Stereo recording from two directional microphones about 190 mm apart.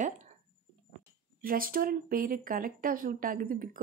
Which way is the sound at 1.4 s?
50° right (ahead or behind).